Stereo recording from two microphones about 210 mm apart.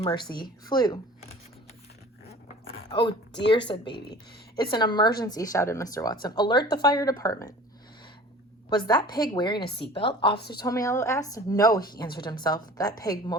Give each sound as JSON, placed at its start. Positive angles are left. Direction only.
{"t": 0.3, "sound": "a woman's voice", "side_deg": 20}
{"t": 2.9, "sound": "a woman's voice", "side_deg": 20}
{"t": 8.7, "sound": "a woman's voice", "side_deg": 20}
{"t": 10.3, "sound": "a woman's voice", "side_deg": 50}
{"t": 10.7, "sound": "a woman's voice", "side_deg": 15}